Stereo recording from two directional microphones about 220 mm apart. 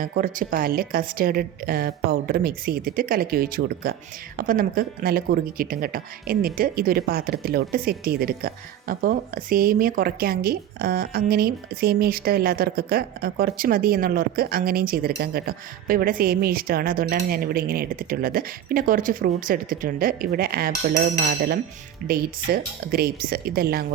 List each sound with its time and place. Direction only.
0.0 s a woman's voice: 40° right (ahead or behind)
22.5 s speech: 45° right (ahead or behind)